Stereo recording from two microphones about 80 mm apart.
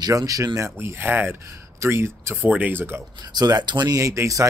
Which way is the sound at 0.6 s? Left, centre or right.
Right.